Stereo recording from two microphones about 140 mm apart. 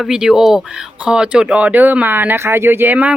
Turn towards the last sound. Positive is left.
turn(degrees=-10)  # may be behind; listen again after turning